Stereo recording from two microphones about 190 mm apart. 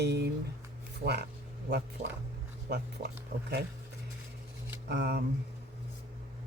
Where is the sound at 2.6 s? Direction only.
60° right (ahead or behind).